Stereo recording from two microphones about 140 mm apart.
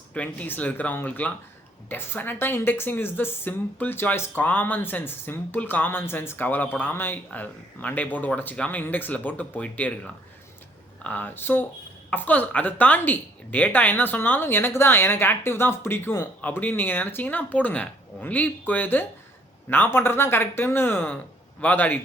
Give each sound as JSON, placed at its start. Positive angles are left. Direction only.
{"t": 0.1, "sound": "speech", "side_deg": 10}
{"t": 11.0, "sound": "speech", "side_deg": 10}